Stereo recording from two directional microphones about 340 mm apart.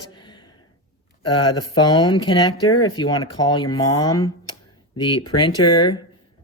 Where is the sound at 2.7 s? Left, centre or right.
Left.